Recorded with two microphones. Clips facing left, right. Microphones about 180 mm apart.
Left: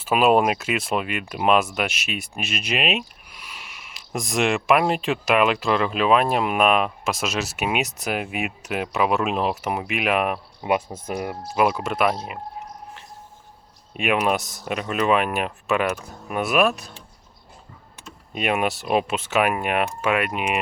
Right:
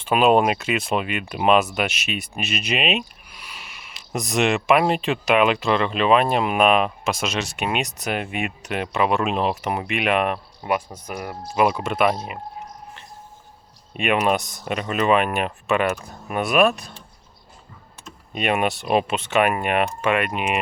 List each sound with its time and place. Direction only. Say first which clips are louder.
0.0 s speech: right 1 dB; 5° left (ahead or behind)
10.6 s speech: left 3 dB; 20° left (ahead or behind)
11.5 s speech: right 1 dB; 5° left (ahead or behind)
13.9 s speech: right 1 dB; centre (ahead or behind)
18.3 s speech: right 1 dB; 5° left (ahead or behind)